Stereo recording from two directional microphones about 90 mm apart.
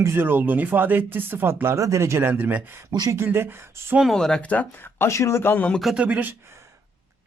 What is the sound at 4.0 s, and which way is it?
Speech, 5° left (ahead or behind).